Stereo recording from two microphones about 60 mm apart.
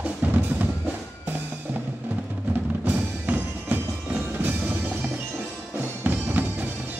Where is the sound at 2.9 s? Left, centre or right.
Right.